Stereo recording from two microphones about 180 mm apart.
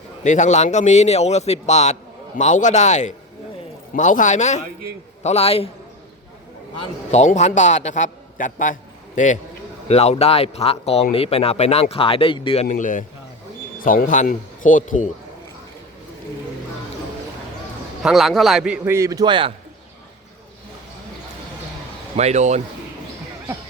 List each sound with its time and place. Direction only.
0.2 s a man's voice: 40° left (ahead or behind)
7.1 s a man's voice: 40° left (ahead or behind)
12.6 s a man's voice: 45° left (ahead or behind)
18.0 s a man's voice: centre (ahead or behind); by 19.5 s 30° right (ahead or behind)
22.1 s speech: 40° right (ahead or behind)